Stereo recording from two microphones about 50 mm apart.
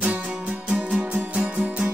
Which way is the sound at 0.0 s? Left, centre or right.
Right.